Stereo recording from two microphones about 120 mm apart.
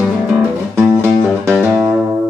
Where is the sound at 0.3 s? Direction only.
15° right (ahead or behind).